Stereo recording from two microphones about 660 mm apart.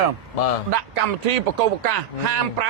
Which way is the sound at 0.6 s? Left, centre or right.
Right.